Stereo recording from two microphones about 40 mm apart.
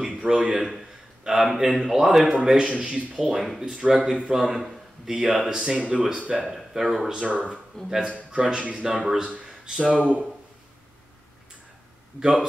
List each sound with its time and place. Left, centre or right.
0.2 s speech: centre
0.6 s speech: centre
1.2 s speech: centre
3.8 s speech: right
4.4 s speech: centre
6.4 s speech: centre
7.2 s speech: right
7.7 s a man's voice: centre
8.3 s speech: centre
9.7 s speech: right
12.2 s speech: centre